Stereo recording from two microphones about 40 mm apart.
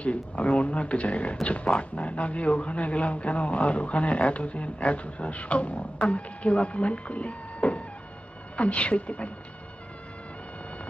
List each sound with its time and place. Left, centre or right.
0.0 s speech: left